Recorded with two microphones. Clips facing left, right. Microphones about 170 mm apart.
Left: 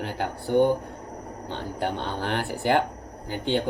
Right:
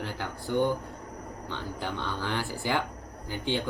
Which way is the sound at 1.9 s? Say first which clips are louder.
Left 3 dB; 20° left (ahead or behind).